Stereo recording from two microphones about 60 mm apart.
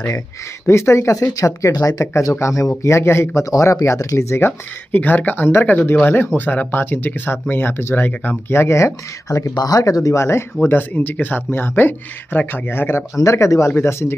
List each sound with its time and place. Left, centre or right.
0.7 s speech: left
1.3 s speech: left
3.4 s speech: left
4.4 s speech: left
9.6 s speech: left
10.6 s speech: left
13.2 s speech: left
13.7 s speech: left